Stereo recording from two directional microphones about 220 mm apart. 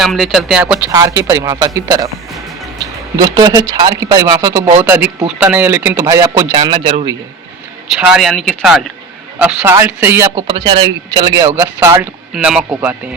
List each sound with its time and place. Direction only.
0.0 s speech: centre (ahead or behind)
3.2 s speech: 15° right (ahead or behind)
7.9 s speech: centre (ahead or behind)